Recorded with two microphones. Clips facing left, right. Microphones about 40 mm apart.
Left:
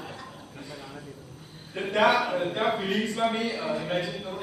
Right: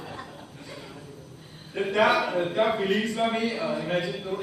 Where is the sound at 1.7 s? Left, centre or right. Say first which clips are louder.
Right 1 dB; centre.